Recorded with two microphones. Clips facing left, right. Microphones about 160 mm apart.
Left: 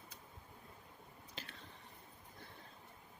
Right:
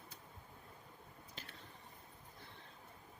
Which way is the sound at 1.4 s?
90° left.